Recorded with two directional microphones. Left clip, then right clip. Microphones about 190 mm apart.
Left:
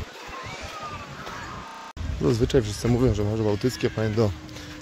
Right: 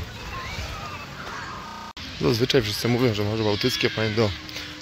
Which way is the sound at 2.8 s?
5° left (ahead or behind).